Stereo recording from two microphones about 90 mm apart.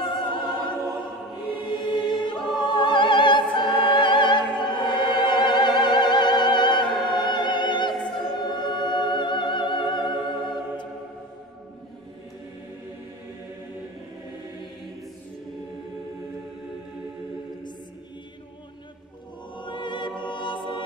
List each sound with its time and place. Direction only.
0.0 s opera: 60° left (ahead or behind)
2.0 s choir: 60° left (ahead or behind)
19.5 s choir: 60° left (ahead or behind)